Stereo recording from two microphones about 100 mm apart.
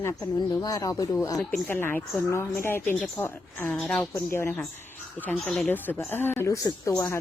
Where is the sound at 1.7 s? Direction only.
20° left (ahead or behind).